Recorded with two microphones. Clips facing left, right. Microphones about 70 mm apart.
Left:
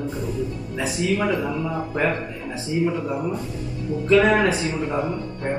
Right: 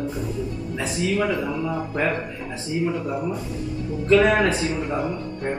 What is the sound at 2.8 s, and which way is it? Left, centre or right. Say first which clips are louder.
A man's voice: even; left.